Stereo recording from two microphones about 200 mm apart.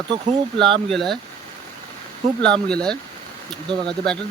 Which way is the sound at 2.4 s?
5° left (ahead or behind).